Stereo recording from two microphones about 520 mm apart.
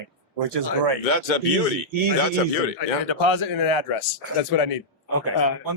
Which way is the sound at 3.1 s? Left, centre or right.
Left.